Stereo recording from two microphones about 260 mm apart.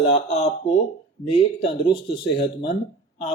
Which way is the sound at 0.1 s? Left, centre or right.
Left.